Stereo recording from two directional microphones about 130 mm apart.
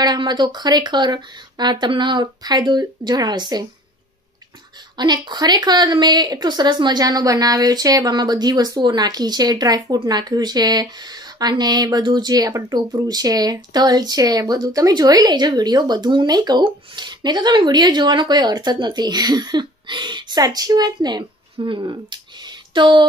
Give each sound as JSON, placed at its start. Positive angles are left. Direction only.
{"t": 0.0, "sound": "a woman's voice", "side_deg": -35}
{"t": 4.9, "sound": "a woman's voice", "side_deg": -35}